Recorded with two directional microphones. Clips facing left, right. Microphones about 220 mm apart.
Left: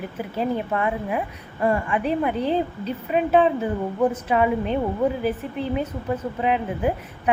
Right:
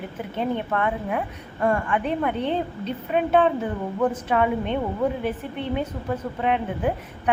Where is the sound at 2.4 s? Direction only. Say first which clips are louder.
Left 2 dB; 35° left (ahead or behind).